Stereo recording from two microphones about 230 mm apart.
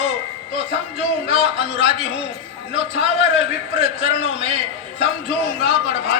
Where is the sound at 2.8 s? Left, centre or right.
Left.